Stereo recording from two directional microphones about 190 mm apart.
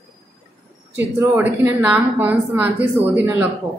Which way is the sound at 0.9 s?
10° right (ahead or behind).